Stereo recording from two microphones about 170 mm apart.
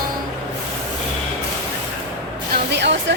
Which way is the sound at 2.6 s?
90° right.